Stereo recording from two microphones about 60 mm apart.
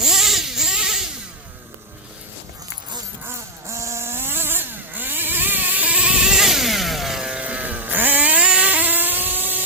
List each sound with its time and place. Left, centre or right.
0.0 s a sound: centre
3.2 s vehicle: right; by 7.4 s centre
7.4 s vehicle: right